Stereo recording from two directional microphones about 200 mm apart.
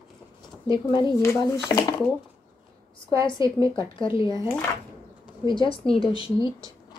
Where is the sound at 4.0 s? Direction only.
25° left (ahead or behind).